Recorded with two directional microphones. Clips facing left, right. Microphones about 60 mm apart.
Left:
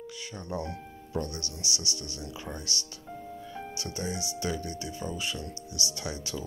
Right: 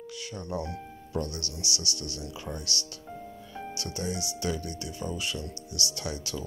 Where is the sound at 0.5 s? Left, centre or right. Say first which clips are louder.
Even; left.